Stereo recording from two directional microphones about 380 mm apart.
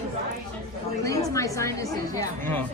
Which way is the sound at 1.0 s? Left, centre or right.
Centre.